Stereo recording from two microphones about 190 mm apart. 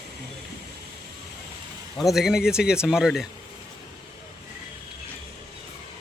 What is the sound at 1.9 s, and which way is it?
Speech, centre (ahead or behind).